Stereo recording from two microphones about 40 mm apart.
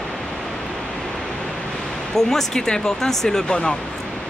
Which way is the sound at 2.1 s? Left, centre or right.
Centre.